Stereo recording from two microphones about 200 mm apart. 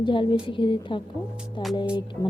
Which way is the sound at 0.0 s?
25° left (ahead or behind).